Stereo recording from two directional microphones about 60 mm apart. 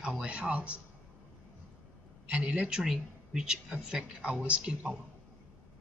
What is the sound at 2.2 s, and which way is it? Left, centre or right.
Speech, centre.